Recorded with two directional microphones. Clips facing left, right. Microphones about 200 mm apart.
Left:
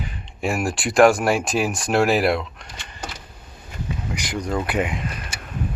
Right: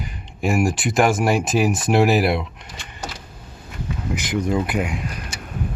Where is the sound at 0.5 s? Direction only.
15° right (ahead or behind).